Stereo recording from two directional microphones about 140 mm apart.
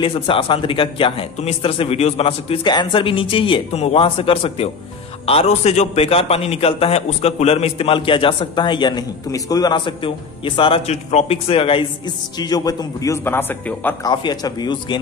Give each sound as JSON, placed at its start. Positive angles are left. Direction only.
{"t": 0.0, "sound": "a man's voice", "side_deg": 40}
{"t": 12.4, "sound": "a man's voice", "side_deg": 30}
{"t": 14.0, "sound": "a man's voice", "side_deg": 30}